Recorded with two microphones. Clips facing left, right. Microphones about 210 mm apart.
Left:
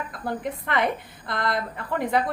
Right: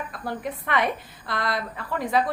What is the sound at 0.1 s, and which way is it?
A woman's voice, 20° left (ahead or behind).